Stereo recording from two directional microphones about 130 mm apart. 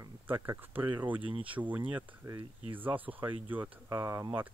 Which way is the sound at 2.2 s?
30° right (ahead or behind).